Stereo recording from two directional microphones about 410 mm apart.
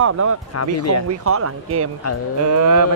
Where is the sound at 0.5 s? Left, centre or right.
Left.